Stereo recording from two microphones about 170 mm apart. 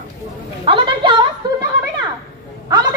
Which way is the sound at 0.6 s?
30° right (ahead or behind).